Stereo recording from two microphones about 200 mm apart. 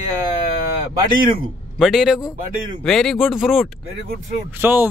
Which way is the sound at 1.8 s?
Centre (ahead or behind).